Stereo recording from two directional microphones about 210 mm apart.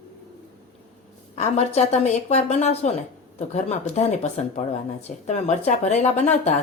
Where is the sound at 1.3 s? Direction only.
30° left (ahead or behind).